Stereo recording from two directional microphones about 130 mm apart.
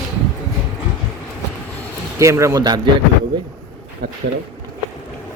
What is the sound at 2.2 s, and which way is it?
Speech, 20° right (ahead or behind).